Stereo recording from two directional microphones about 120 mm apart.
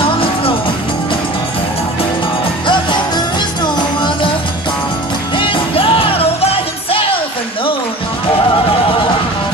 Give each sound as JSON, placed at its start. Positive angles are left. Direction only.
{"t": 2.6, "sound": "music", "side_deg": 40}
{"t": 5.4, "sound": "music", "side_deg": 45}